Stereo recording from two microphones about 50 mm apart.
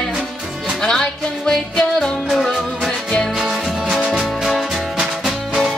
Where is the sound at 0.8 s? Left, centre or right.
Centre.